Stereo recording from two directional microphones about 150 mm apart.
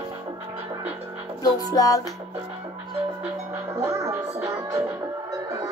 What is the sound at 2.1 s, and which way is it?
Music, 25° right (ahead or behind).